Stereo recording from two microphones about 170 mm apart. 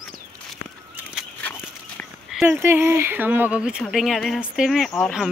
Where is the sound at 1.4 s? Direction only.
10° left (ahead or behind).